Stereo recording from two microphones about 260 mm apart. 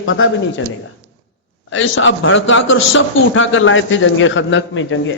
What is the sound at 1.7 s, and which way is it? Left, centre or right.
A man's voice, left.